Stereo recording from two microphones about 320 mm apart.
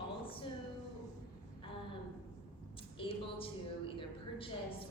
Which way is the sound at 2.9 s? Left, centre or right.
Centre.